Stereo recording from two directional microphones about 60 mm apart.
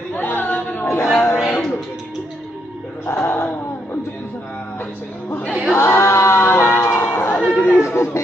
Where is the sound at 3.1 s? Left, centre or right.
Left.